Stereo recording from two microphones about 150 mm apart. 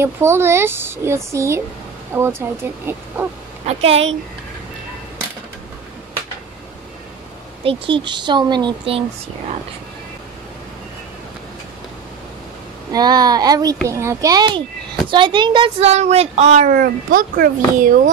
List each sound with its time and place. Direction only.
0.0 s speech: 15° right (ahead or behind)
3.6 s a sound: 45° right (ahead or behind)
7.6 s speech: 35° right (ahead or behind)
12.9 s a child's voice: 25° right (ahead or behind)
15.9 s a sound: 45° right (ahead or behind)
16.7 s a child's voice: 65° right (ahead or behind)